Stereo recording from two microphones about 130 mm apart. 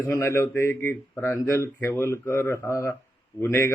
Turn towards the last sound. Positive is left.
turn(degrees=20)  # may be behind; listen again after turning